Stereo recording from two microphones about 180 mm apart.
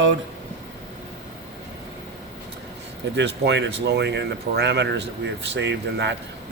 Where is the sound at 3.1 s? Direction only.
75° right (ahead or behind).